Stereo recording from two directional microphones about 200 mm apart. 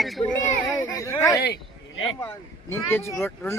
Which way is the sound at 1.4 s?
60° left (ahead or behind).